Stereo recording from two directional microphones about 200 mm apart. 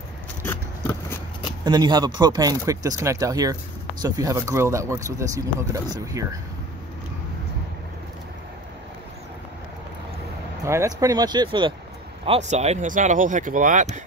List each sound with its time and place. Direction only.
0.4 s scissors: 10° left (ahead or behind)
1.6 s speech: 20° right (ahead or behind)
10.6 s speech: 15° right (ahead or behind)
12.3 s speech: 35° right (ahead or behind)